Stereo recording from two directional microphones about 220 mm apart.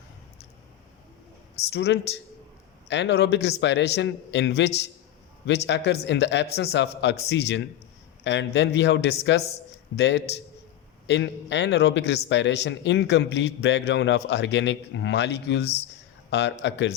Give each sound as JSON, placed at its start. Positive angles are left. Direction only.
{"t": 1.7, "sound": "a man's voice", "side_deg": 50}